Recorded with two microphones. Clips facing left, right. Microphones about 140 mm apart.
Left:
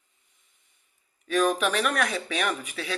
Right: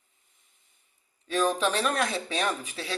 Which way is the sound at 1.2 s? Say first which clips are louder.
Left 2 dB; 30° right (ahead or behind).